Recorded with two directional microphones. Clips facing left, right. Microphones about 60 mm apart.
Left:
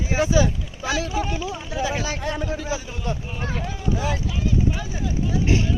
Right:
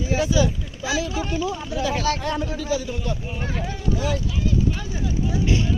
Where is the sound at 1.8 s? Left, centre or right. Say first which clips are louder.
Right 2 dB; centre.